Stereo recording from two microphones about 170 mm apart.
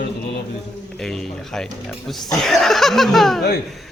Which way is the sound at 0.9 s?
5° left (ahead or behind).